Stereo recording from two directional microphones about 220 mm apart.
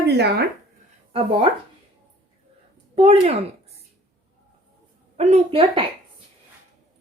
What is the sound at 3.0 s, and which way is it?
Speech, 25° right (ahead or behind).